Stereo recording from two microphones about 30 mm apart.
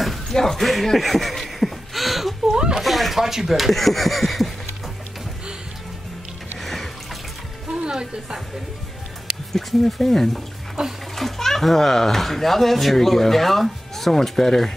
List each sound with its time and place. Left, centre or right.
0.0 s music: centre
0.4 s a child's voice: centre
0.9 s a sound: centre
2.4 s a sound: right
2.8 s a sound: centre
3.2 s speech: centre
6.6 s water: centre
7.8 s speech: right
9.5 s a child's voice: centre
10.8 s speech: centre
11.1 s a child's voice: centre